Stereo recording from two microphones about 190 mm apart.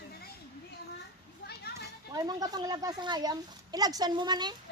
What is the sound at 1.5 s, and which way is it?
Children playing, 55° left (ahead or behind).